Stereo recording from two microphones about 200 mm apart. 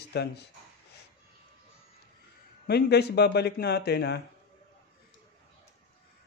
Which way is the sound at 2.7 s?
55° left (ahead or behind).